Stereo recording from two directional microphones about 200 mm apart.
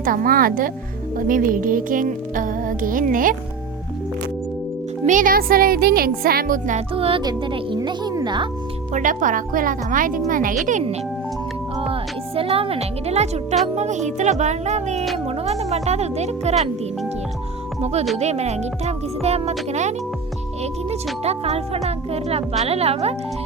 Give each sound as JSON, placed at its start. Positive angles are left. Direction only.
{"t": 0.0, "sound": "music", "side_deg": -45}
{"t": 5.0, "sound": "music", "side_deg": -40}
{"t": 6.9, "sound": "a child's voice", "side_deg": -25}
{"t": 8.9, "sound": "music", "side_deg": -40}
{"t": 10.7, "sound": "speech", "side_deg": -35}
{"t": 17.7, "sound": "speech", "side_deg": -30}
{"t": 20.9, "sound": "speech", "side_deg": -30}